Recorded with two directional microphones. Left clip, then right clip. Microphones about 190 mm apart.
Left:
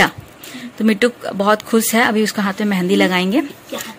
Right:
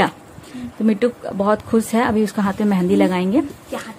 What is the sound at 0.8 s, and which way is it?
Speech, 5° right (ahead or behind).